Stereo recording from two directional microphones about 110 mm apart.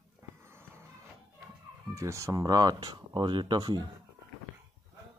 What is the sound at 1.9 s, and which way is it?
Speech, 25° right (ahead or behind).